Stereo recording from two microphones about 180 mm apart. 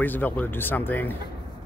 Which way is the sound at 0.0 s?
10° left (ahead or behind).